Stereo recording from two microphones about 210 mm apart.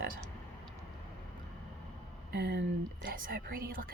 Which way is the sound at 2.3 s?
50° right (ahead or behind).